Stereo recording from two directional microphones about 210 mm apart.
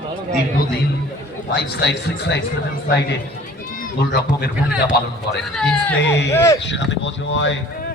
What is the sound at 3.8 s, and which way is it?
Speech, 50° left (ahead or behind).